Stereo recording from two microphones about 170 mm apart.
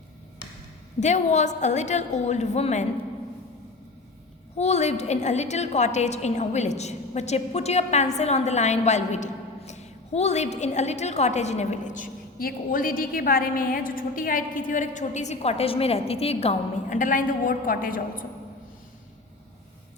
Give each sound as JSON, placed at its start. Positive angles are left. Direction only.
{"t": 0.9, "sound": "a woman's voice", "side_deg": 45}
{"t": 4.5, "sound": "a woman's voice", "side_deg": 40}